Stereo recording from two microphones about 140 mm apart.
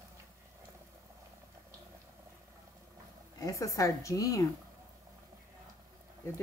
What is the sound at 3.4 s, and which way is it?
A woman's voice, 25° left (ahead or behind).